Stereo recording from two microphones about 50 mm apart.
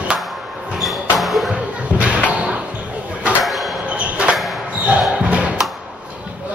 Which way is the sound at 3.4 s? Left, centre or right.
Centre.